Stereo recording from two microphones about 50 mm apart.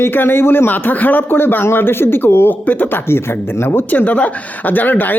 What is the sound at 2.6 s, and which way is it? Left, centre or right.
Speech, left.